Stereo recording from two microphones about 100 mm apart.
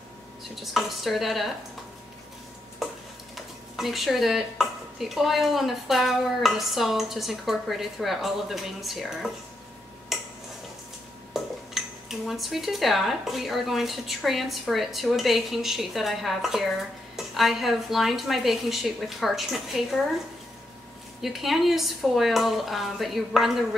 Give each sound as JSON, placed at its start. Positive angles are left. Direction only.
{"t": 0.4, "sound": "speech", "side_deg": 0}
{"t": 3.3, "sound": "speech", "side_deg": 0}
{"t": 10.1, "sound": "tick-tock", "side_deg": 0}
{"t": 11.3, "sound": "speech", "side_deg": -5}
{"t": 21.2, "sound": "speech", "side_deg": 0}